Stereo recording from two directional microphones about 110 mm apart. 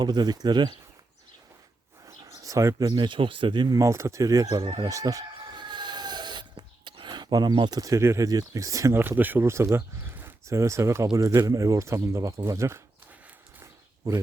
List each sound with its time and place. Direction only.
0.0 s speech: 40° right (ahead or behind)
2.0 s bird: 30° right (ahead or behind)
2.8 s speech: 45° right (ahead or behind)
3.8 s speech: 25° right (ahead or behind)
4.9 s a sound: 30° right (ahead or behind)
11.3 s speech: 30° right (ahead or behind)
13.6 s a sound: 30° right (ahead or behind)